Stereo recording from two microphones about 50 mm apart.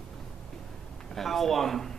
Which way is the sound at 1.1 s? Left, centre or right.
Centre.